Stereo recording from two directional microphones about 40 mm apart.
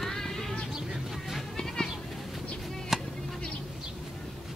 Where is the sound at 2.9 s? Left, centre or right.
Centre.